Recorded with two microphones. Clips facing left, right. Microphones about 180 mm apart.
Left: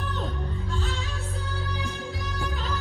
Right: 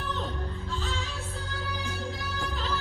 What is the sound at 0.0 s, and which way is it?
Music, centre (ahead or behind).